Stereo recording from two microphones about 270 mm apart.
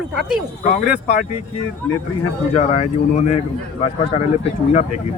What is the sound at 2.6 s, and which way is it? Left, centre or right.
Speech, left.